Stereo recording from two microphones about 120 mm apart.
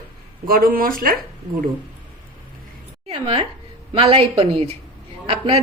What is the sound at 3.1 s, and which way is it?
A woman's voice, 50° right (ahead or behind).